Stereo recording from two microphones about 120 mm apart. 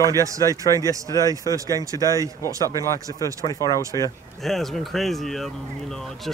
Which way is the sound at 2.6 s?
25° left (ahead or behind).